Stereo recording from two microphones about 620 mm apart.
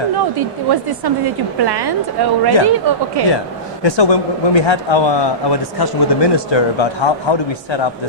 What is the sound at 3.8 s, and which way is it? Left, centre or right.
Speech, left.